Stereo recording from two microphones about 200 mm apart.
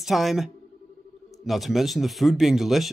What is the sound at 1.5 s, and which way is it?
Speech, centre (ahead or behind).